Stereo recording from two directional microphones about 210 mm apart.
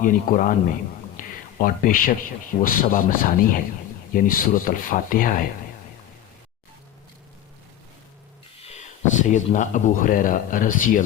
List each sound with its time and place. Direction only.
0.0 s a man's voice: 40° left (ahead or behind)
8.6 s speech: 35° left (ahead or behind)